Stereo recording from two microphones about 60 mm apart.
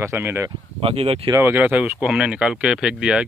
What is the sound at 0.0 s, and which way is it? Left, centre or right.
Speech, right.